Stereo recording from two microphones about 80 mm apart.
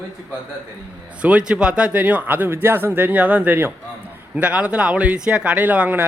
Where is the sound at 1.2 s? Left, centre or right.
Centre.